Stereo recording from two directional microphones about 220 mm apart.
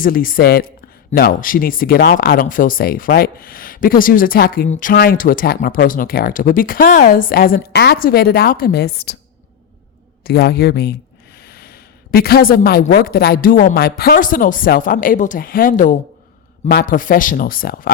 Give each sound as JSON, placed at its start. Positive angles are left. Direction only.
{"t": 0.0, "sound": "a woman's voice", "side_deg": 40}
{"t": 10.2, "sound": "a woman's voice", "side_deg": 45}